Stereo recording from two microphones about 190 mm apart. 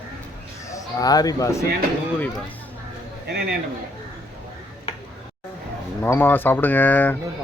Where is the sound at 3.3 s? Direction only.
60° right (ahead or behind).